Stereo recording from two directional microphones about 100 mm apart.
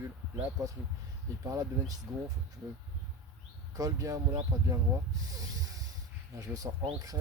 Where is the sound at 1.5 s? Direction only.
35° right (ahead or behind).